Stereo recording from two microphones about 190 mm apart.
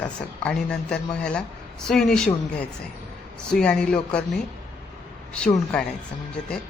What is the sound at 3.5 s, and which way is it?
Speech, 5° left (ahead or behind).